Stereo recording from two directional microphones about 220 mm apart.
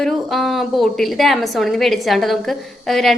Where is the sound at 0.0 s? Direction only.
Centre (ahead or behind).